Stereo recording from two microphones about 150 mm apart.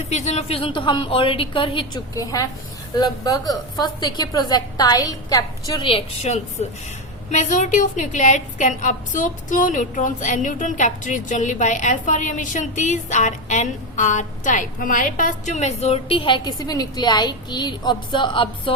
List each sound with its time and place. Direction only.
0.1 s a woman's voice: 50° left (ahead or behind); by 6.0 s 30° left (ahead or behind)
6.2 s a woman's voice: 50° left (ahead or behind); by 18.7 s 35° left (ahead or behind)